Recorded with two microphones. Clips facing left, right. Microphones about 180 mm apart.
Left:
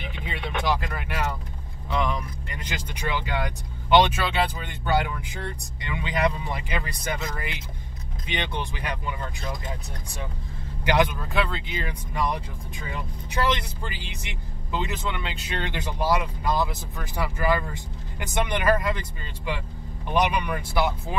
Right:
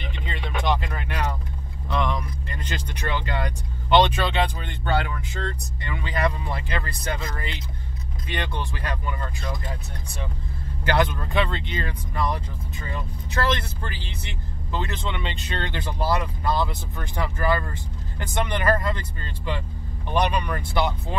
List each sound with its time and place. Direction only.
0.0 s vehicle: 10° left (ahead or behind)
1.9 s speech: 10° left (ahead or behind)
11.3 s speech: 5° left (ahead or behind)